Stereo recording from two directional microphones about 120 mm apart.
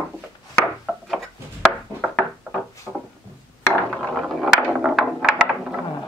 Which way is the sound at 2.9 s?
5° right (ahead or behind).